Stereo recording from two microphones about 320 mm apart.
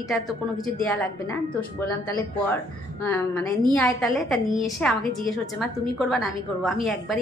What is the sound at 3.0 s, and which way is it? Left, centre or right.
A woman's voice, centre.